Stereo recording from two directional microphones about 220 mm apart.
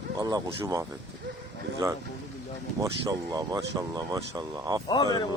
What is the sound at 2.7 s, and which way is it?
Speech, 15° right (ahead or behind).